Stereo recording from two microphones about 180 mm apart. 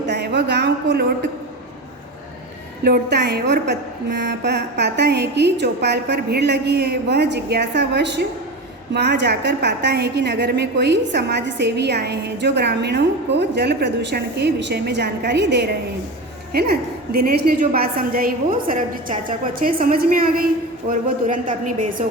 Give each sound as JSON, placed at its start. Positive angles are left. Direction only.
{"t": 0.1, "sound": "a sound", "side_deg": -70}
{"t": 2.8, "sound": "a woman's voice", "side_deg": -65}
{"t": 17.1, "sound": "a woman's voice", "side_deg": -60}